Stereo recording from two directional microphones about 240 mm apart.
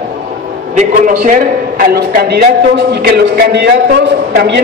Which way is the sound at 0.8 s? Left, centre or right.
Right.